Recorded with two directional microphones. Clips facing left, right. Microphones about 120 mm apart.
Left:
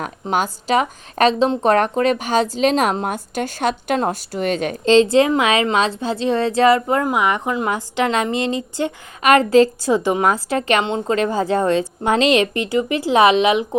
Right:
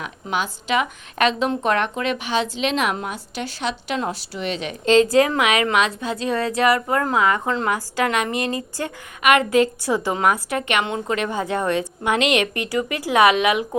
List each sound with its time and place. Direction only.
0.0 s speech: 45° left (ahead or behind)
4.9 s a woman's voice: 25° left (ahead or behind)
9.2 s a woman's voice: 35° left (ahead or behind)